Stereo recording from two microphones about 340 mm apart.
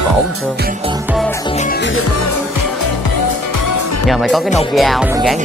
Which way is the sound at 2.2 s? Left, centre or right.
Left.